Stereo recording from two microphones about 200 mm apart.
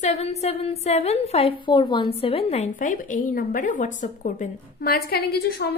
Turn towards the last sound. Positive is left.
turn(degrees=50)  # may be behind; listen again after turning